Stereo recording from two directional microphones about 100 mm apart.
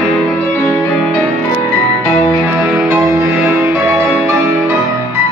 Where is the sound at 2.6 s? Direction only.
15° right (ahead or behind).